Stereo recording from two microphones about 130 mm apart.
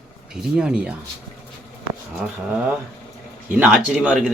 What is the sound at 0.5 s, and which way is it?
Speech, 5° right (ahead or behind).